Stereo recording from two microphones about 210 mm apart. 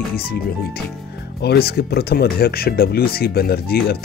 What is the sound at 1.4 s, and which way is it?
Speech, 50° left (ahead or behind).